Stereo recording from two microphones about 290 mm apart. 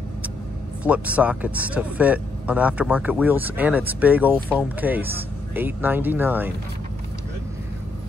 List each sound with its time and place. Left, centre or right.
0.8 s speech: centre